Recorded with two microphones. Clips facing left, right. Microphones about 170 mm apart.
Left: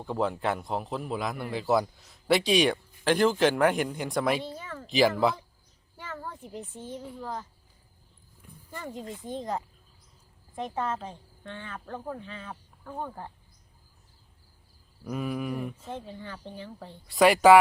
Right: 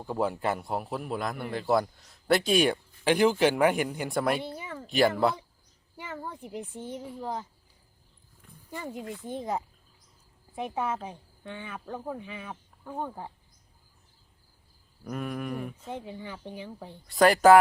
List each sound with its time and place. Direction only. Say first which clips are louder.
0.0 s a man's voice: even; 5° right (ahead or behind)
4.5 s a sound: right 1 dB; 15° right (ahead or behind)
4.9 s a man's voice: left 1 dB; centre (ahead or behind)
6.0 s a child's voice: right 1 dB; 10° right (ahead or behind)
8.7 s speech: right 1 dB; 10° right (ahead or behind)
9.0 s speech: right 1 dB; 20° left (ahead or behind)
9.3 s speech: even; 10° right (ahead or behind)
15.0 s a man's voice: left 2 dB; centre (ahead or behind)
15.9 s speech: right 1 dB; 15° right (ahead or behind)
17.1 s a man's voice: even; centre (ahead or behind)